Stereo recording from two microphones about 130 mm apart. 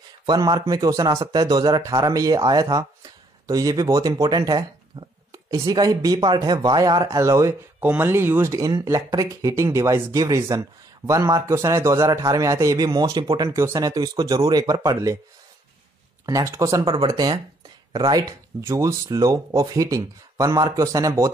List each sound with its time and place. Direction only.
0.3 s a man's voice: 30° right (ahead or behind)
16.3 s a man's voice: 25° right (ahead or behind)